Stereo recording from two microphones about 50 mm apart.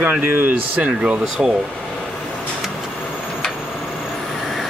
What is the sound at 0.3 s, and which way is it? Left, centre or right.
Speech, right.